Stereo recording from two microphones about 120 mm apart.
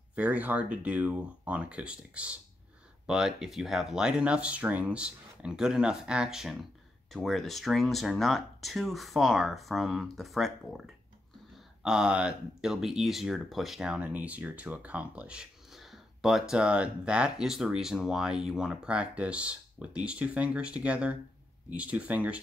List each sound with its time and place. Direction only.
0.1 s speech: 10° right (ahead or behind)